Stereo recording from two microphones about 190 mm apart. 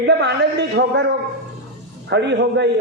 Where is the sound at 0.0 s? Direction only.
65° right (ahead or behind).